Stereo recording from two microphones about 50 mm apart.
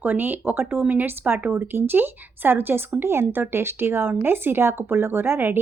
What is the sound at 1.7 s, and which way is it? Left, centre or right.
Speech, right.